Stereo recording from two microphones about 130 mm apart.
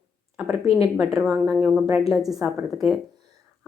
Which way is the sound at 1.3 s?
5° right (ahead or behind).